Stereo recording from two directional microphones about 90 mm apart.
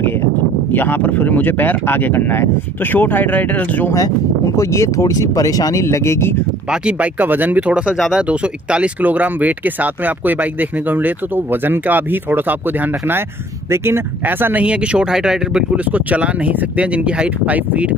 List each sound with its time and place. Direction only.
0.7 s speech: 20° left (ahead or behind)
4.6 s speech: 35° left (ahead or behind)
6.7 s speech: 15° right (ahead or behind)
13.7 s speech: 25° right (ahead or behind)